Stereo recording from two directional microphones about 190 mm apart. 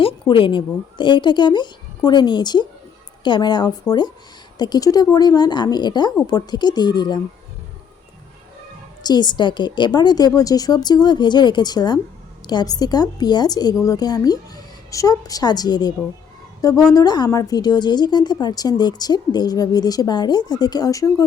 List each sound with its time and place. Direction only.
0.0 s a woman's voice: 25° left (ahead or behind)
9.0 s a woman's voice: 25° left (ahead or behind)